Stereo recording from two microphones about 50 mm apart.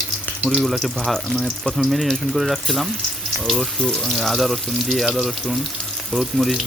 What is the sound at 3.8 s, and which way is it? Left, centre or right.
Speech, left.